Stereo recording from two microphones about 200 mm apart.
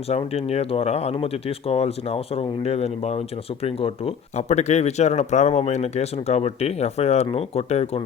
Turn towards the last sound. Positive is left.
turn(degrees=30)  # may be behind; listen again after turning